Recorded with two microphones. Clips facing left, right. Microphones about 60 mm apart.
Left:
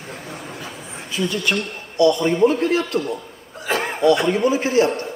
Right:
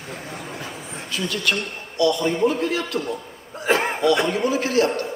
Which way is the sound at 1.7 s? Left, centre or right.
Left.